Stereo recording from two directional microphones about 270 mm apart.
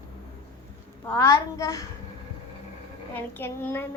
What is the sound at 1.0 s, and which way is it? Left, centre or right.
Speech, centre.